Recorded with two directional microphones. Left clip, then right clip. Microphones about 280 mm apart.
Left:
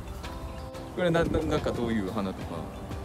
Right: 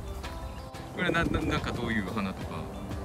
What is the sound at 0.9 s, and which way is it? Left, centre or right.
Speech, centre.